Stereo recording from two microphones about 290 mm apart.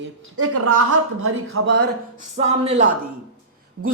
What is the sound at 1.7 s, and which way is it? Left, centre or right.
Speech, right.